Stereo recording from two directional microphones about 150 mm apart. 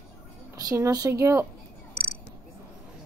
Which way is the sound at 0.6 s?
25° right (ahead or behind).